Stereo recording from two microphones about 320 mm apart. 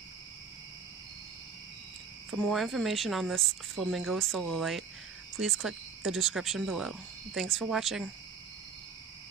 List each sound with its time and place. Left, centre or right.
2.3 s speech: centre